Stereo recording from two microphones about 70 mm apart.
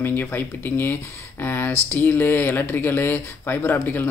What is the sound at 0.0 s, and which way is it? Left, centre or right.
Speech, left.